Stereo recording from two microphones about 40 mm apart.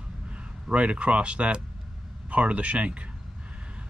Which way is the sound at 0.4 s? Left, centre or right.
Right.